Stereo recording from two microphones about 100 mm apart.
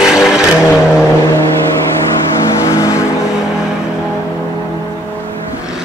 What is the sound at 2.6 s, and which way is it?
Vehicle, 30° left (ahead or behind).